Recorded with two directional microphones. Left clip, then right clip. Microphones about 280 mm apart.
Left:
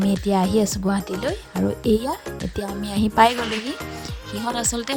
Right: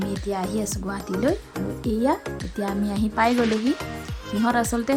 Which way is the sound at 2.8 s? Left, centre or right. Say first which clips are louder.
Left 7 dB; left.